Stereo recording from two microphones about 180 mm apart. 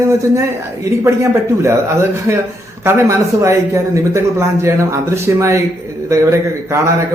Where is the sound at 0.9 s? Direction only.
15° right (ahead or behind).